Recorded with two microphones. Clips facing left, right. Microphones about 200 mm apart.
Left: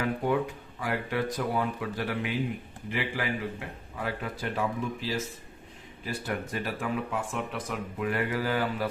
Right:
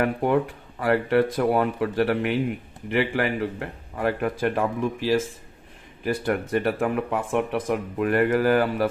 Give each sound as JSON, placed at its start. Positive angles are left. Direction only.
{"t": 0.0, "sound": "a man's voice", "side_deg": -60}